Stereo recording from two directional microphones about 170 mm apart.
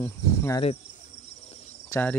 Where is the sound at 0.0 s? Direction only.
15° left (ahead or behind).